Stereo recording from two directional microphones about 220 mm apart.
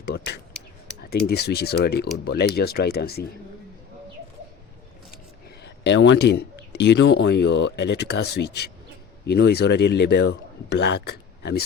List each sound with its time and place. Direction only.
0.5 s computer keyboard: 5° left (ahead or behind)
1.3 s speech: 45° left (ahead or behind)
5.6 s speech: 55° left (ahead or behind)